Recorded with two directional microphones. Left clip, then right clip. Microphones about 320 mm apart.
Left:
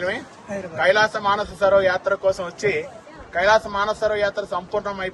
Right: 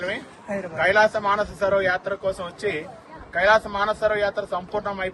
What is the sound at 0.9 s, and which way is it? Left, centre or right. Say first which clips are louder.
Speech: even; centre.